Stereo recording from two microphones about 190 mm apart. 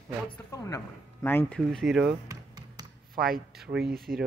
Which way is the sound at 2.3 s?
20° right (ahead or behind).